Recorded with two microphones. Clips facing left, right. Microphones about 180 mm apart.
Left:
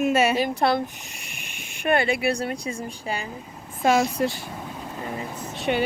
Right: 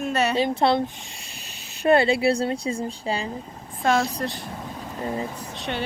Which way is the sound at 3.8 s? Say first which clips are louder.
Left 2 dB; centre (ahead or behind).